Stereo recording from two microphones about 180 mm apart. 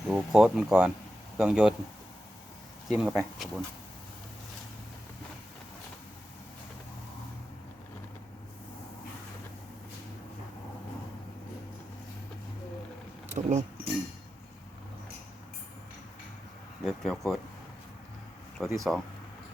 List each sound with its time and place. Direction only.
0.1 s speech: centre (ahead or behind)
3.0 s speech: 5° right (ahead or behind)
13.2 s vehicle: 40° right (ahead or behind)
16.8 s speech: centre (ahead or behind)
18.5 s speech: centre (ahead or behind)